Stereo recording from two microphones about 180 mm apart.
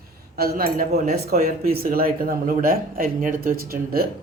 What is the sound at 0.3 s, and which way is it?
Speech, 55° right (ahead or behind).